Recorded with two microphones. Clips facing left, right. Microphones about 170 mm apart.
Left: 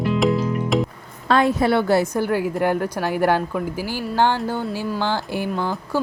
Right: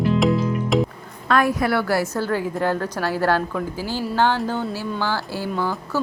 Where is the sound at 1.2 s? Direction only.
25° left (ahead or behind).